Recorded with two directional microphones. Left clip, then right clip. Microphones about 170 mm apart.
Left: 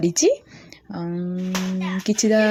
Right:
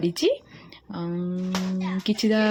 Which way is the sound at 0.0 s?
20° left (ahead or behind).